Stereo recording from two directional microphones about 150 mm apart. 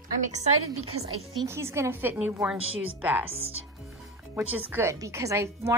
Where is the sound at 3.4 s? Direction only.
40° right (ahead or behind).